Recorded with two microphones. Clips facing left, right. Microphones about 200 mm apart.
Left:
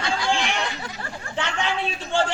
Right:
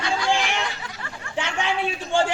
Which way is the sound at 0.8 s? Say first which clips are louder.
Left 3 dB; 35° left (ahead or behind).